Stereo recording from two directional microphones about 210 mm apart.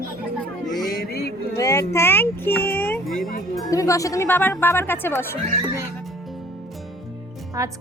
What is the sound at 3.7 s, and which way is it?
Speech, 15° left (ahead or behind).